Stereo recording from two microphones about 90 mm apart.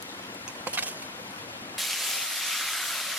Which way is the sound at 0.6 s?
15° right (ahead or behind).